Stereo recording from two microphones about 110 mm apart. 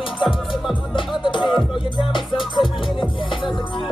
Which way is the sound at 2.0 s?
50° left (ahead or behind).